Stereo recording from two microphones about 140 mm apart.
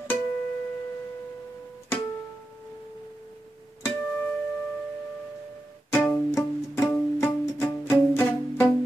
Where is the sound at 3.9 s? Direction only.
5° left (ahead or behind).